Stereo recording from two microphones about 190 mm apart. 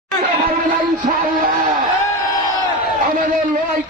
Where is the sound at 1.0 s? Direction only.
45° right (ahead or behind).